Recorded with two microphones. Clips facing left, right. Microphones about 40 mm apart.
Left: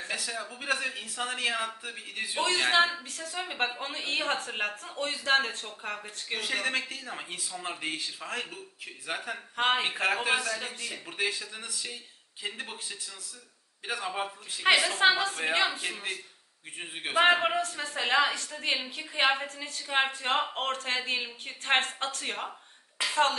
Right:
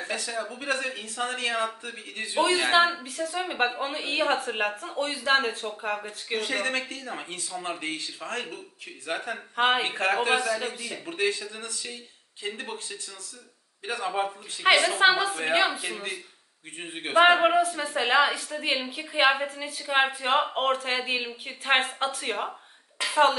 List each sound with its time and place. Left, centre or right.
0.1 s a woman's voice: centre